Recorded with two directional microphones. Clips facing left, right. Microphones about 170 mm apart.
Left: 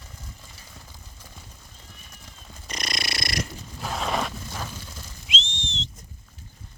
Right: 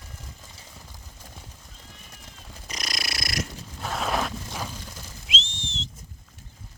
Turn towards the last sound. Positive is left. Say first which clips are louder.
# left 1 dB
turn(degrees=-5)  # may be behind; listen again after turning